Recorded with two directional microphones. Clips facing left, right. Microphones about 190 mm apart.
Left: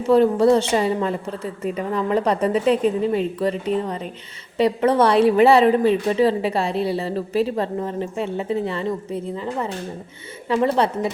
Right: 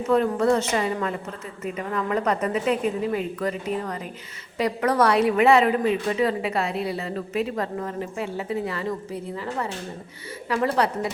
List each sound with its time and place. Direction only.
0.1 s a woman's voice: 30° left (ahead or behind)